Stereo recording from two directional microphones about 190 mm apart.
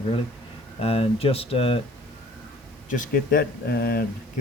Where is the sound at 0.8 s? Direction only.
30° left (ahead or behind).